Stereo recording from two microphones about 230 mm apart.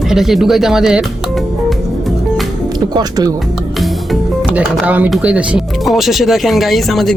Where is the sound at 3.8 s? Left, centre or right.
Centre.